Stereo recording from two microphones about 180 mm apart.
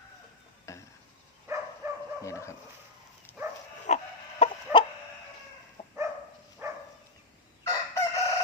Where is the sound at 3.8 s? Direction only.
40° left (ahead or behind).